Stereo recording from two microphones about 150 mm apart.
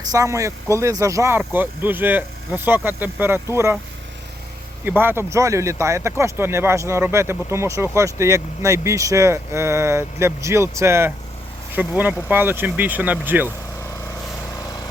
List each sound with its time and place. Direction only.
0.1 s speech: 20° right (ahead or behind)
4.9 s speech: 15° right (ahead or behind)